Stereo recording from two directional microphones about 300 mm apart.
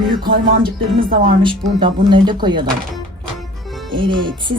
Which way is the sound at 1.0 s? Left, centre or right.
Centre.